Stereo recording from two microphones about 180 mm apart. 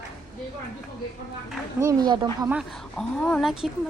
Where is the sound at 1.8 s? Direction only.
20° right (ahead or behind).